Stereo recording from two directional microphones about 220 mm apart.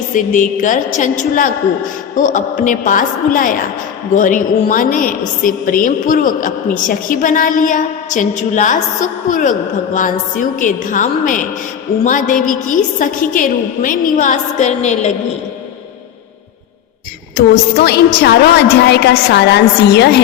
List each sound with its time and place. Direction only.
0.1 s a woman's voice: 35° left (ahead or behind)
17.3 s a woman's voice: 45° left (ahead or behind)